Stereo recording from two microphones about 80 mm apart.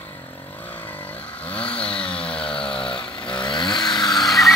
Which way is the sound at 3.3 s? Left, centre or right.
Left.